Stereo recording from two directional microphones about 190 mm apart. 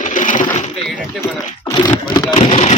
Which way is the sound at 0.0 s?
40° left (ahead or behind).